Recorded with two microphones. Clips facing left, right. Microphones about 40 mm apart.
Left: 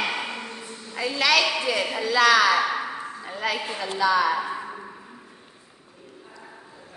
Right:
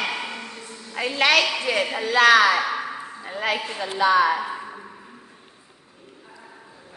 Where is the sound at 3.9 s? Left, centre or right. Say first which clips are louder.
Right 3 dB; right.